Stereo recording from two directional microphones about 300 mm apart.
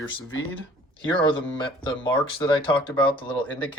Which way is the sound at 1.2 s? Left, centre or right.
Centre.